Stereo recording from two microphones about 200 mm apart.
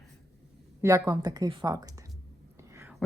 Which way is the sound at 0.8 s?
15° right (ahead or behind).